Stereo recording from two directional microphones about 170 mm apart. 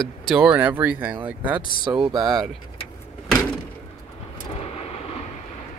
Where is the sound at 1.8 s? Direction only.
25° right (ahead or behind).